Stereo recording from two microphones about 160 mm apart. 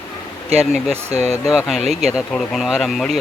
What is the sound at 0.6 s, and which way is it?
Speech, 5° right (ahead or behind).